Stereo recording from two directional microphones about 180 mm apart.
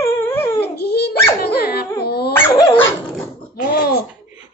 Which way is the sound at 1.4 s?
60° left (ahead or behind).